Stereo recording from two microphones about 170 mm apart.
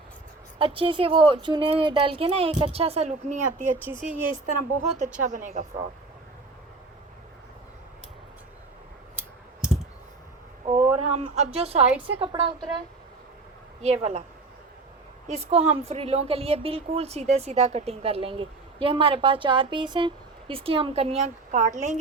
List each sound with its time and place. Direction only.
0.6 s a woman's voice: 30° right (ahead or behind); by 3.7 s 50° right (ahead or behind)
3.9 s speech: 15° right (ahead or behind)
4.4 s a woman's voice: 45° right (ahead or behind)
9.1 s clicking: 5° right (ahead or behind)
11.1 s a woman's voice: 40° right (ahead or behind)
13.8 s a woman's voice: 40° right (ahead or behind)
15.3 s a woman's voice: 40° right (ahead or behind)